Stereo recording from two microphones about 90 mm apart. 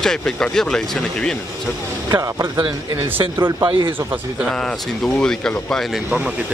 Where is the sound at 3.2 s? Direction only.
25° right (ahead or behind).